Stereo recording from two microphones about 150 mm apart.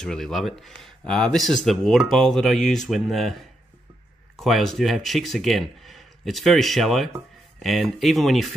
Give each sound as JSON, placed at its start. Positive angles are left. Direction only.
{"t": 0.0, "sound": "speech", "side_deg": 5}